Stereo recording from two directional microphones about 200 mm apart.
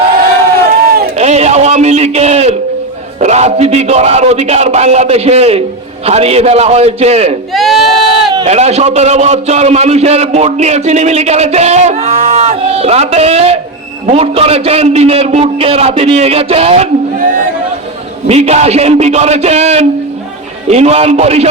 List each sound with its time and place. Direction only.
1.1 s a sound: 35° right (ahead or behind)
3.2 s a man's voice: 35° right (ahead or behind)
7.5 s sheep: centre (ahead or behind)
8.4 s a man's voice: 30° right (ahead or behind)